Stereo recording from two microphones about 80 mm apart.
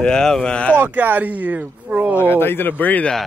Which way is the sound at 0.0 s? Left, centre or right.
Centre.